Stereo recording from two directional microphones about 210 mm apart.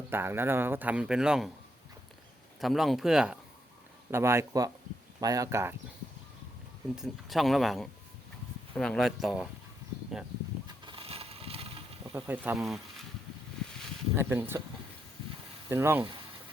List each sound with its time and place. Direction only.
0.1 s speech: 10° right (ahead or behind)
2.6 s speech: centre (ahead or behind)
6.9 s speech: centre (ahead or behind)
10.8 s a sound: 25° right (ahead or behind)
12.1 s speech: 10° right (ahead or behind)
14.2 s speech: 10° right (ahead or behind)
15.7 s speech: 10° right (ahead or behind)